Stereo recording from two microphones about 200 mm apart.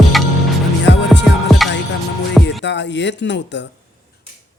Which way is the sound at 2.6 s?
60° left (ahead or behind).